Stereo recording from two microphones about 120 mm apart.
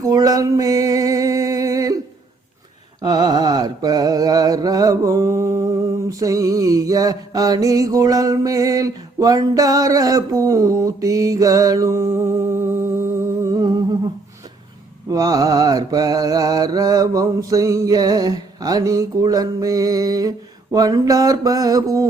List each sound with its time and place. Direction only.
0.0 s a sound: 30° right (ahead or behind)
3.0 s mantra: 35° right (ahead or behind)
15.1 s mantra: 30° right (ahead or behind)